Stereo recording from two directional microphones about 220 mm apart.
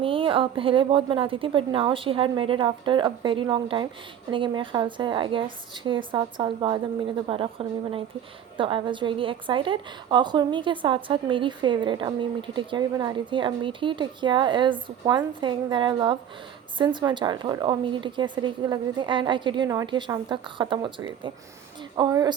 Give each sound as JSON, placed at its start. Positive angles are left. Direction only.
{"t": 0.0, "sound": "a woman's voice", "side_deg": -25}